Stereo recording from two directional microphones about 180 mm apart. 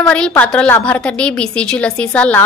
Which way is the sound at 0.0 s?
5° left (ahead or behind).